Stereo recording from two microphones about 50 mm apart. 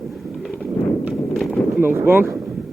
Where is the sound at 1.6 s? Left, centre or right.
Left.